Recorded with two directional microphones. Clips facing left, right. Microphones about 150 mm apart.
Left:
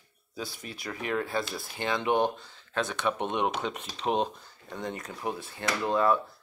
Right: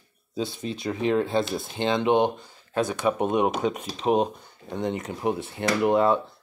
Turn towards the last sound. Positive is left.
turn(degrees=-25)  # may be behind; listen again after turning